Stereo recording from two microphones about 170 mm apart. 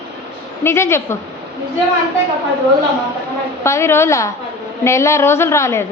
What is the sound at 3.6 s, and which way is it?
A woman's voice, 15° left (ahead or behind).